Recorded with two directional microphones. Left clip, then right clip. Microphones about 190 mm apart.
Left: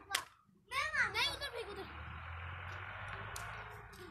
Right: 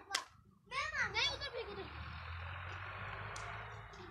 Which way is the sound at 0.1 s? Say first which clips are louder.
Left 1 dB; 15° right (ahead or behind).